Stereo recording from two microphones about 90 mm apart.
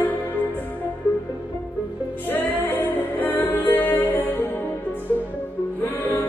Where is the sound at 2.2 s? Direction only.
25° left (ahead or behind).